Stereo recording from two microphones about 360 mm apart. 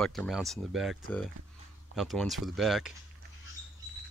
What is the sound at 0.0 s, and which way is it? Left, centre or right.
Speech, centre.